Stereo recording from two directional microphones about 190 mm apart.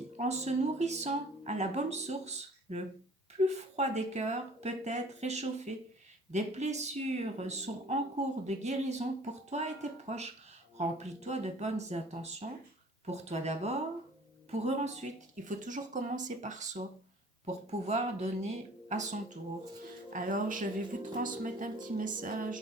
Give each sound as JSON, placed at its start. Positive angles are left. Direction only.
{"t": 0.2, "sound": "speech", "side_deg": -35}